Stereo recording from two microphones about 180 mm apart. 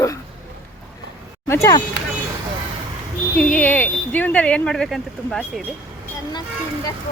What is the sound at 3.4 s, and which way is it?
Speech, 10° left (ahead or behind).